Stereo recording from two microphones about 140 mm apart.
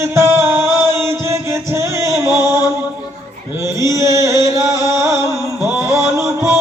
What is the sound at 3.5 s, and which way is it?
Music, 20° right (ahead or behind).